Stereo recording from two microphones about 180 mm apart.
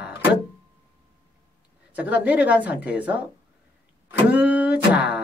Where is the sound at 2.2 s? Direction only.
10° right (ahead or behind).